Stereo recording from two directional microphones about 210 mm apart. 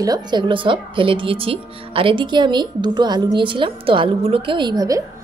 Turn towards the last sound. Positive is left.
turn(degrees=-20)  # may be behind; listen again after turning